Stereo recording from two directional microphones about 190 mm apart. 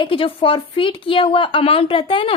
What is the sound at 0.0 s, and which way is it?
A woman's voice, 30° left (ahead or behind).